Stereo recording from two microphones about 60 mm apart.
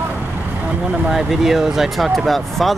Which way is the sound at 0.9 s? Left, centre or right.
Centre.